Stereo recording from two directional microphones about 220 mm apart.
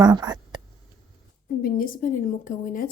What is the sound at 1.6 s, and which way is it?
A woman's voice, 40° left (ahead or behind).